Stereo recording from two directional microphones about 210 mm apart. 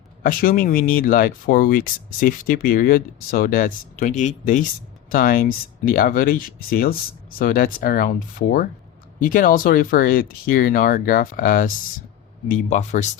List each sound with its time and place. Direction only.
0.2 s speech: 45° left (ahead or behind)